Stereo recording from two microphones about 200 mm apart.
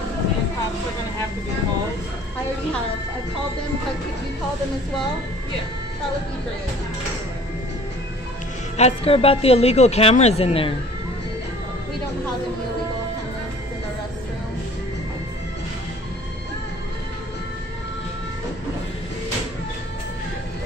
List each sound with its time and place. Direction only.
8.7 s speech: 30° left (ahead or behind)